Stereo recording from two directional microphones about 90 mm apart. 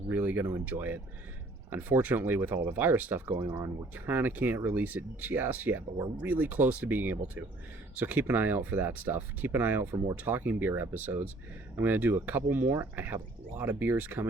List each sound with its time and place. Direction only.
0.1 s speech: 25° right (ahead or behind)
3.3 s speech: 35° right (ahead or behind)
3.9 s speech: 20° right (ahead or behind)